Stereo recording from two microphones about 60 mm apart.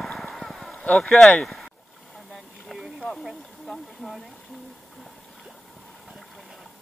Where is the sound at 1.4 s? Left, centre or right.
Centre.